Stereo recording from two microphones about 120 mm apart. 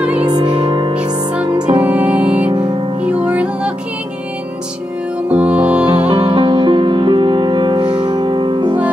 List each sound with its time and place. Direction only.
0.4 s music: 45° right (ahead or behind)
0.9 s music: 10° right (ahead or behind)
5.3 s music: 10° right (ahead or behind)
6.0 s music: 50° right (ahead or behind)